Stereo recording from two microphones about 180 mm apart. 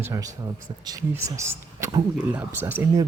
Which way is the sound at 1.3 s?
15° right (ahead or behind).